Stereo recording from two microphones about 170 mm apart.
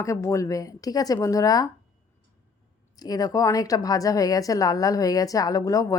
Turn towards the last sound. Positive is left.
turn(degrees=20)  # may be behind; listen again after turning